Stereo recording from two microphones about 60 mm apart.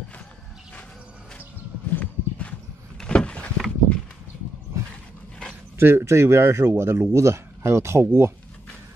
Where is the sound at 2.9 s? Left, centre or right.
Centre.